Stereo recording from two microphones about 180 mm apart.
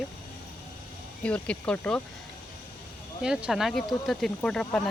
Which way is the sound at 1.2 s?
5° left (ahead or behind).